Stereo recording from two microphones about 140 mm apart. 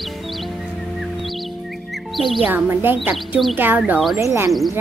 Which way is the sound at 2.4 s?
10° right (ahead or behind).